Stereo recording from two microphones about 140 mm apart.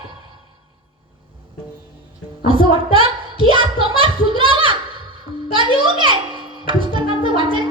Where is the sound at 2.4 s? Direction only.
40° right (ahead or behind).